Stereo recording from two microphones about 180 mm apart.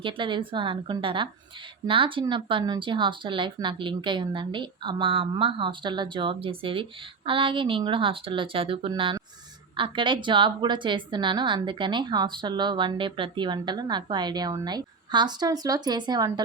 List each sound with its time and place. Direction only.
0.0 s a woman's voice: 25° right (ahead or behind)